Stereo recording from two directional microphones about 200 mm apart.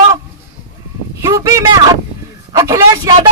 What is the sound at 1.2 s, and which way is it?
Speech, 15° right (ahead or behind).